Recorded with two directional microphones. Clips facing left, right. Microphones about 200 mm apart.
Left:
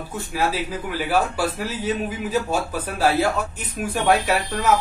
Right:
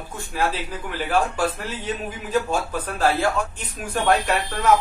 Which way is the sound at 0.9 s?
10° left (ahead or behind).